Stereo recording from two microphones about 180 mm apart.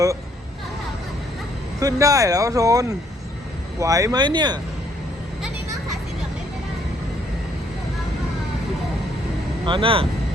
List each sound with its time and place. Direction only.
1.8 s speech: 20° right (ahead or behind)
9.6 s speech: 30° right (ahead or behind)